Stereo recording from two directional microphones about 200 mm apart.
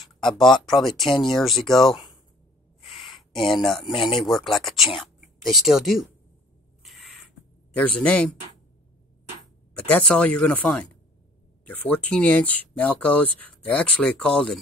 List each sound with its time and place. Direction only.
0.0 s speech: centre (ahead or behind)
2.8 s a sound: 25° left (ahead or behind)
3.2 s a sound: centre (ahead or behind)
4.2 s speech: centre (ahead or behind)
6.8 s rodents: centre (ahead or behind)
7.7 s speech: 5° left (ahead or behind)
9.8 s speech: 10° left (ahead or behind)